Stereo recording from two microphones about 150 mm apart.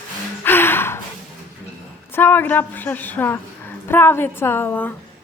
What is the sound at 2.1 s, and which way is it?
A woman's voice, 15° left (ahead or behind).